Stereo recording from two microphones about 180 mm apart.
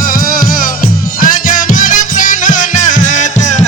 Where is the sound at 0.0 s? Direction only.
50° left (ahead or behind).